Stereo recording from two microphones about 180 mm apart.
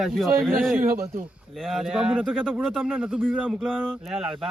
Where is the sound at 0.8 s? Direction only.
50° right (ahead or behind).